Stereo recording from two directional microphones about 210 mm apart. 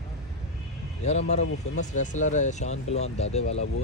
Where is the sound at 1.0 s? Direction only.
30° left (ahead or behind).